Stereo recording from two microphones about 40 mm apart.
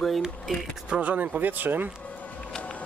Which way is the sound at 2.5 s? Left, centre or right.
Left.